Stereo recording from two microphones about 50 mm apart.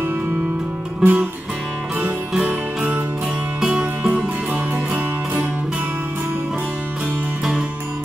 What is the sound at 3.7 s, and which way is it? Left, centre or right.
Music, right.